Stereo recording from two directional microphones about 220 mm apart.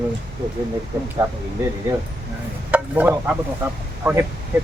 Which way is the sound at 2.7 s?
5° right (ahead or behind).